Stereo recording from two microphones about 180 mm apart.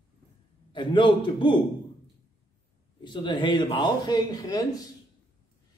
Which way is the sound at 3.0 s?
25° left (ahead or behind).